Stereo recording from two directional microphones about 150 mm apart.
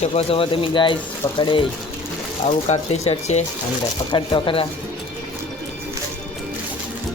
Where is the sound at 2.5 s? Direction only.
50° left (ahead or behind).